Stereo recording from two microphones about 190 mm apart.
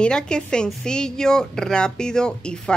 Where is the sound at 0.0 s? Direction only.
5° left (ahead or behind).